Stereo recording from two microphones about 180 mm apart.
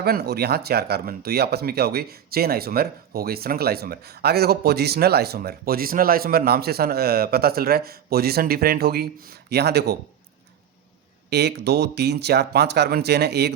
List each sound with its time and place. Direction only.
0.0 s speech: 60° right (ahead or behind)
11.3 s speech: 65° right (ahead or behind)